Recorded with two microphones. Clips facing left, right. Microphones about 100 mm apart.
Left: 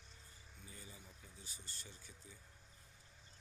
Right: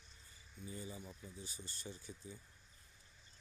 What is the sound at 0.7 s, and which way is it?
Speech, 25° right (ahead or behind).